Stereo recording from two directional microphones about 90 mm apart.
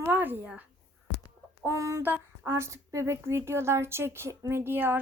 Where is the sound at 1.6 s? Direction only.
35° right (ahead or behind).